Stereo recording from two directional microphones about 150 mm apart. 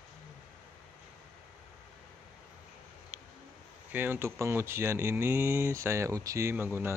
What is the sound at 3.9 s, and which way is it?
Speech, 15° right (ahead or behind).